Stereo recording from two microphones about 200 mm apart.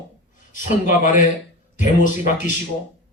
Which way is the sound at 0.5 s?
40° left (ahead or behind).